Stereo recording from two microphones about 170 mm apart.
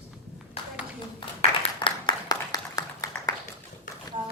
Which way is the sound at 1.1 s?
30° left (ahead or behind).